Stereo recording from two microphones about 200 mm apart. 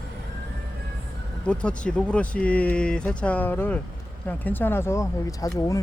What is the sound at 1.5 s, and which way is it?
Speech, 5° left (ahead or behind).